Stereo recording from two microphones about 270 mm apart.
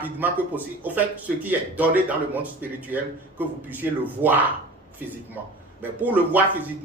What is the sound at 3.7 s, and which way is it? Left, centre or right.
Speech, centre.